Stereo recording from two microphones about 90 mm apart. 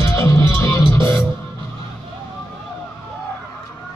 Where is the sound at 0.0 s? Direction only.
35° left (ahead or behind).